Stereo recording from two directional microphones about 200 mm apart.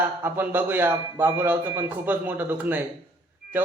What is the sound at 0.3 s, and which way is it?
A man's voice, 10° right (ahead or behind).